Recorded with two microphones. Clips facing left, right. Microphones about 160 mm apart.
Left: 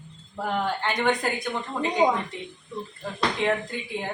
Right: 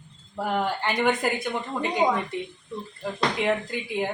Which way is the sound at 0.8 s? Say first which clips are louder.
Right 1 dB; 5° right (ahead or behind).